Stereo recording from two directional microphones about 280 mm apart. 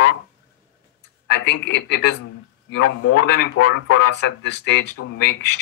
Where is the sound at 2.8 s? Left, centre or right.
Left.